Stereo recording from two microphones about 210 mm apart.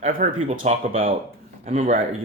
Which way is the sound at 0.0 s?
40° right (ahead or behind).